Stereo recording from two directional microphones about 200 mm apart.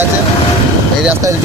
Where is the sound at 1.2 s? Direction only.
15° right (ahead or behind).